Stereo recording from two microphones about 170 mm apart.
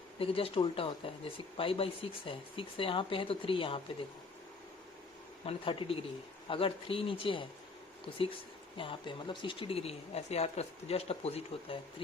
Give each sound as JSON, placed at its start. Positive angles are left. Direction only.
{"t": 0.2, "sound": "speech", "side_deg": 35}
{"t": 5.5, "sound": "speech", "side_deg": 35}
{"t": 8.8, "sound": "speech", "side_deg": 30}